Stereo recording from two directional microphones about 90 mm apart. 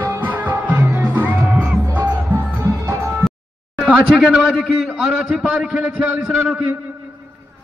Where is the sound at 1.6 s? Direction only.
Centre (ahead or behind).